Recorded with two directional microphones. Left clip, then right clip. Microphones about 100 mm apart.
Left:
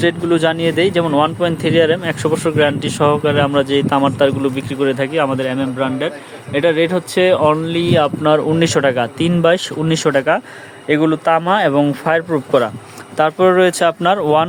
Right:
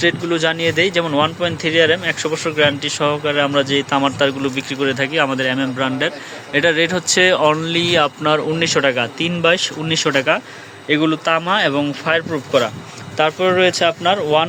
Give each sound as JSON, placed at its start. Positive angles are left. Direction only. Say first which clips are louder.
{"t": 0.0, "sound": "speech", "louder": "left 2 dB", "side_deg": 55}
{"t": 2.3, "sound": "speech", "louder": "left 2 dB", "side_deg": 65}
{"t": 2.9, "sound": "speech", "louder": "left 3 dB", "side_deg": 65}
{"t": 8.5, "sound": "speech", "louder": "left 2 dB", "side_deg": 60}
{"t": 10.1, "sound": "speech", "louder": "left 3 dB", "side_deg": 45}
{"t": 11.3, "sound": "speech", "louder": "left 3 dB", "side_deg": 40}
{"t": 12.5, "sound": "speech", "louder": "left 1 dB", "side_deg": 65}
{"t": 13.1, "sound": "speech", "louder": "left 3 dB", "side_deg": 90}